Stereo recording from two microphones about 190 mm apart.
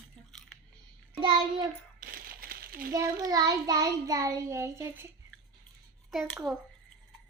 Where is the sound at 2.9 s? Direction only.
15° right (ahead or behind).